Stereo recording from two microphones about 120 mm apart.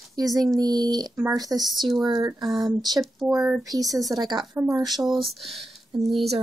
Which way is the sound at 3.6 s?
30° right (ahead or behind).